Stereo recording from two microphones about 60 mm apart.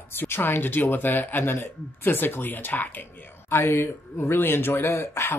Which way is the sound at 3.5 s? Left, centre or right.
Left.